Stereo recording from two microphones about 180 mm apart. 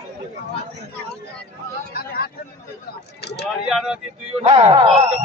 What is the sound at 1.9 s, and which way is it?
Speech, 55° left (ahead or behind).